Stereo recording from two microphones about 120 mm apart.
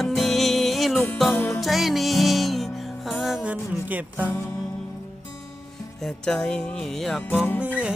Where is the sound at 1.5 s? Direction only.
Centre (ahead or behind).